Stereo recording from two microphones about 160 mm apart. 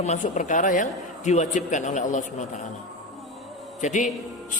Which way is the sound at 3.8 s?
50° left (ahead or behind).